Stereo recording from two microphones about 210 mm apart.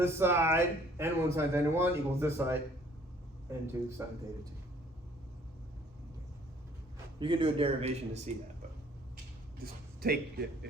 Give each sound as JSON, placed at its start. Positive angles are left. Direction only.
{"t": 0.0, "sound": "speech", "side_deg": -10}
{"t": 3.7, "sound": "speech", "side_deg": -10}
{"t": 7.2, "sound": "a man's voice", "side_deg": -25}
{"t": 10.0, "sound": "a man's voice", "side_deg": -50}